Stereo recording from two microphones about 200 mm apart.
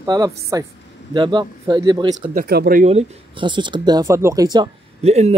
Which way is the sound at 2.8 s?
30° right (ahead or behind).